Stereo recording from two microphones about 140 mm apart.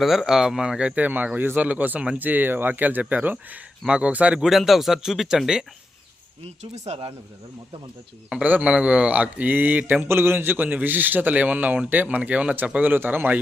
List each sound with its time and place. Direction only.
0.0 s a man's voice: centre (ahead or behind)
6.4 s speech: 50° right (ahead or behind)
8.3 s a man's voice: 10° right (ahead or behind)